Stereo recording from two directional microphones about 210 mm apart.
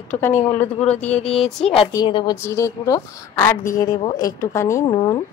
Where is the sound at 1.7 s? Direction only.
20° left (ahead or behind).